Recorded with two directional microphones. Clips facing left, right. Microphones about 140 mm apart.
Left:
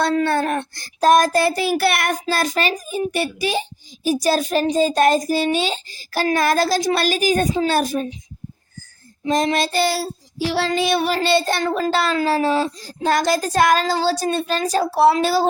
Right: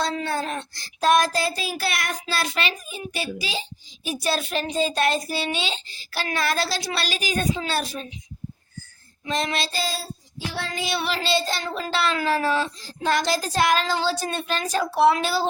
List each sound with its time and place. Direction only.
0.0 s a sound: 60° left (ahead or behind)
2.2 s speech: 40° left (ahead or behind)
3.2 s a sound: 55° left (ahead or behind)
4.0 s a child's voice: 40° left (ahead or behind)
9.2 s child singing: 40° left (ahead or behind); by 10.9 s 70° left (ahead or behind)
10.9 s a child's voice: 45° left (ahead or behind)